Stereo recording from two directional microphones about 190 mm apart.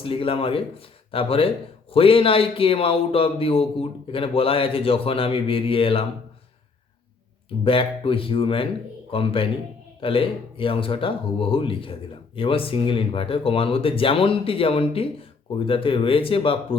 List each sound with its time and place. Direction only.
0.0 s a man's voice: 30° left (ahead or behind)
7.6 s a man's voice: 30° left (ahead or behind)